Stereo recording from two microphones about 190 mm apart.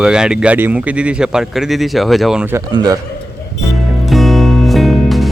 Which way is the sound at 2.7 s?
20° right (ahead or behind).